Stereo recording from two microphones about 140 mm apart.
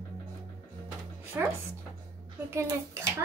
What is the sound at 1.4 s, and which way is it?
A child's voice, 15° right (ahead or behind).